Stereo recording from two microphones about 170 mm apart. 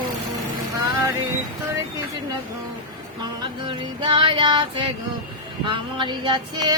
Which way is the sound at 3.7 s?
25° right (ahead or behind).